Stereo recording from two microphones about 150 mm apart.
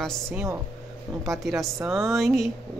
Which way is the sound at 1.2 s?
Centre (ahead or behind).